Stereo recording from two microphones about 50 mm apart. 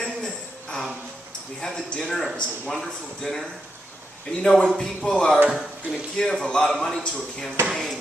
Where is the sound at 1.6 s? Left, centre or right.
Centre.